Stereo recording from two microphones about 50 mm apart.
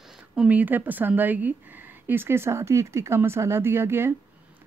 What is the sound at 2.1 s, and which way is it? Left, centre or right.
Speech, right.